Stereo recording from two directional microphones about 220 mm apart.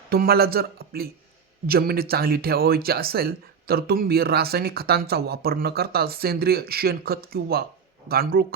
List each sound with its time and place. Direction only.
0.1 s speech: 45° right (ahead or behind)